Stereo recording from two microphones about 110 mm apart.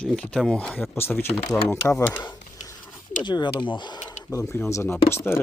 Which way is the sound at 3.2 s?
45° left (ahead or behind).